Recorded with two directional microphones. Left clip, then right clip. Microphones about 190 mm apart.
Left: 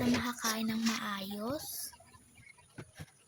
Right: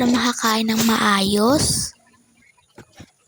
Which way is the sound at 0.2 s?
50° right (ahead or behind).